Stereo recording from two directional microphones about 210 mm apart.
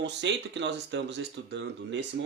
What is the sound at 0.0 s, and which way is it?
Speech, 55° right (ahead or behind).